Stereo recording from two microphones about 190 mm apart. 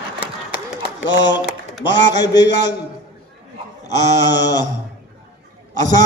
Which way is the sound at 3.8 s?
20° left (ahead or behind).